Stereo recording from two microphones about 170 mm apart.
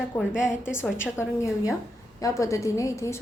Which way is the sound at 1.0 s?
15° left (ahead or behind).